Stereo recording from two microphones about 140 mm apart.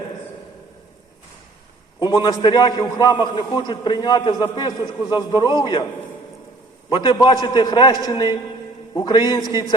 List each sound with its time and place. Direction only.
2.0 s a man's voice: 30° left (ahead or behind)
6.9 s a man's voice: 30° left (ahead or behind)